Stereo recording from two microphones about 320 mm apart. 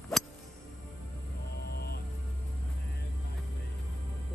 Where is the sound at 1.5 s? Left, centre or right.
Left.